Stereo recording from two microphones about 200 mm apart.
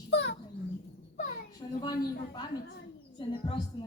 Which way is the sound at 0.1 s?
60° left (ahead or behind).